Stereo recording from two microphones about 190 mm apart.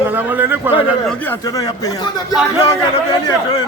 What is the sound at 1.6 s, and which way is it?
Speech, 20° left (ahead or behind).